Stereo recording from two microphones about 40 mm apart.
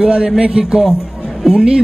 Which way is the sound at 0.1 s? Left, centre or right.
Right.